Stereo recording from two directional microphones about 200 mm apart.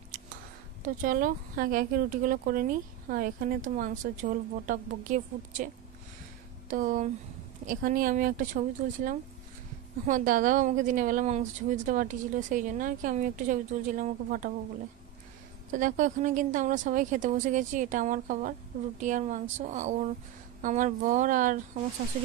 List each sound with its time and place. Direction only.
0.8 s speech: 45° right (ahead or behind)
6.7 s a woman's voice: 40° right (ahead or behind)
15.7 s a woman's voice: 40° right (ahead or behind)